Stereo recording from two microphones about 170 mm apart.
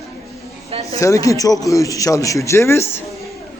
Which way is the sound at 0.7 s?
35° right (ahead or behind).